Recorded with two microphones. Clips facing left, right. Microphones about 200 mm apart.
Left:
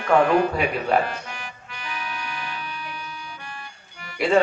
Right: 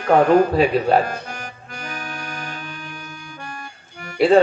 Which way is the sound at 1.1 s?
40° right (ahead or behind).